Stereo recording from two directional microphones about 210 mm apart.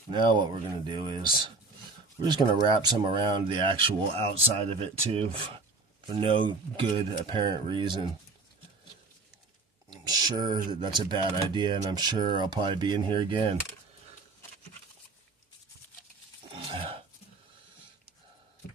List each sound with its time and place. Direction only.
0.1 s speech: 20° right (ahead or behind)
9.9 s speech: 20° right (ahead or behind)
16.6 s a sound: 25° right (ahead or behind)